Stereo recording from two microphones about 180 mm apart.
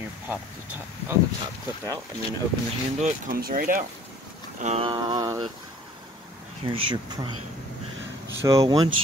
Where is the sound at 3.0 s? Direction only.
40° right (ahead or behind).